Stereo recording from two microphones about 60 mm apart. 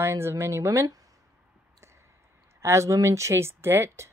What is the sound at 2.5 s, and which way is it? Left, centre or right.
Speech, right.